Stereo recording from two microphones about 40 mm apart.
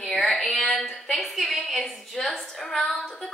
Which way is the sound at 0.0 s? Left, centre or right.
Centre.